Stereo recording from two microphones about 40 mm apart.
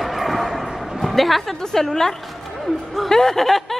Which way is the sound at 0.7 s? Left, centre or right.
Centre.